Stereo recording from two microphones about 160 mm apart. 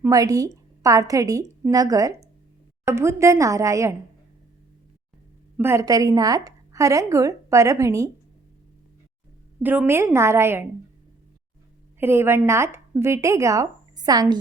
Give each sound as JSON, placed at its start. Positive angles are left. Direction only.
{"t": 0.0, "sound": "a woman's voice", "side_deg": -20}
{"t": 5.5, "sound": "a woman's voice", "side_deg": -15}
{"t": 9.6, "sound": "a woman's voice", "side_deg": -15}
{"t": 11.9, "sound": "a woman's voice", "side_deg": -15}